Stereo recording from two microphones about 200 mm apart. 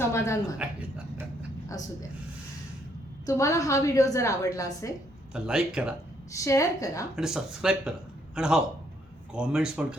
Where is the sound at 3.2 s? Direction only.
15° left (ahead or behind).